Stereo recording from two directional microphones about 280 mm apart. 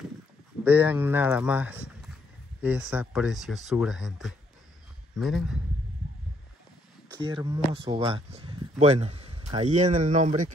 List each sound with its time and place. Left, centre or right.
0.7 s speech: centre
7.2 s speech: centre